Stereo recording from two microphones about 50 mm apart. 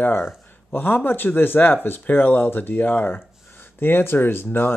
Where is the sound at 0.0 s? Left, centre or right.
Left.